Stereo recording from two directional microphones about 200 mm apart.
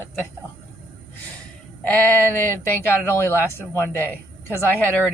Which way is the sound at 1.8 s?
10° left (ahead or behind).